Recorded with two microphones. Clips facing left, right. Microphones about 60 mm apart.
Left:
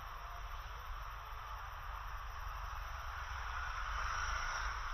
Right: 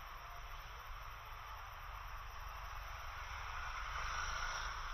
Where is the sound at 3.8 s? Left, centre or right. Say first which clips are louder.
Left 3 dB; left.